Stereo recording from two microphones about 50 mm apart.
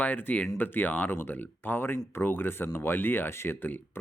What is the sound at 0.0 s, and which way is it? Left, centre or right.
Speech, left.